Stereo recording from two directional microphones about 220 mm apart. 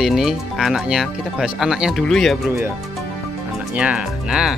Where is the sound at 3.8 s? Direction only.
5° right (ahead or behind).